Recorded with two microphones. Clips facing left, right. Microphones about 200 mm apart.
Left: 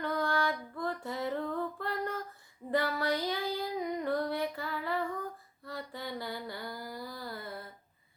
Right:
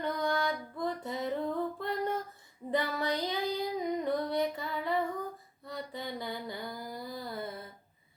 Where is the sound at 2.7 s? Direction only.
20° right (ahead or behind).